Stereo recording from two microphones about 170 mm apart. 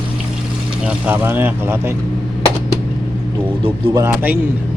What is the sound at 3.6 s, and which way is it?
Speech, 20° right (ahead or behind).